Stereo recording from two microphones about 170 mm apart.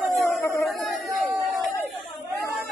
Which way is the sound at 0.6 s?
Centre (ahead or behind).